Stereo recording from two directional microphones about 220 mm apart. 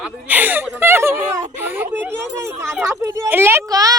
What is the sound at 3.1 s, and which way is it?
Speech, 10° right (ahead or behind).